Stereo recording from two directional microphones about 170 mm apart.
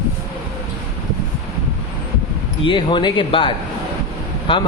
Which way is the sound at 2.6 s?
30° left (ahead or behind).